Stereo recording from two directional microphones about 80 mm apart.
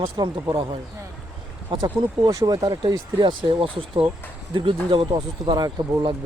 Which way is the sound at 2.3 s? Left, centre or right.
Right.